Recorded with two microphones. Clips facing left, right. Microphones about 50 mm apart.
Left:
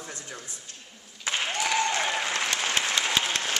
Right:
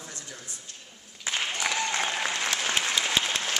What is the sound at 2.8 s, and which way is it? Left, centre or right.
Applause, centre.